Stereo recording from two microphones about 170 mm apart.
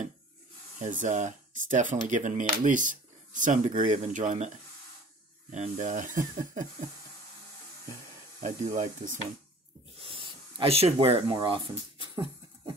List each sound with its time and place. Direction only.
0.7 s speech: 45° right (ahead or behind)
5.5 s speech: 45° right (ahead or behind)
8.7 s speech: 50° right (ahead or behind)
10.0 s speech: 30° right (ahead or behind)